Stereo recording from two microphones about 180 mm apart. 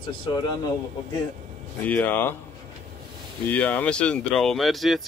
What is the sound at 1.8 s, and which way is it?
Speech, 10° left (ahead or behind).